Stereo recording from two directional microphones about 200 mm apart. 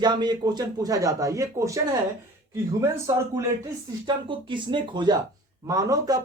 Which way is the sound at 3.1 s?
15° right (ahead or behind).